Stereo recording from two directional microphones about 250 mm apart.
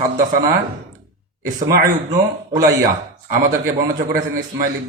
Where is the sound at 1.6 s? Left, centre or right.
Right.